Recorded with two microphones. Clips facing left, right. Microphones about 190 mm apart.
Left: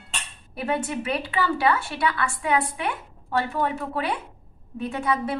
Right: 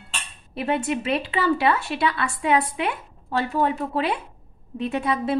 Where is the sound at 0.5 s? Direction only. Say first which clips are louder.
Right 2 dB; 25° right (ahead or behind).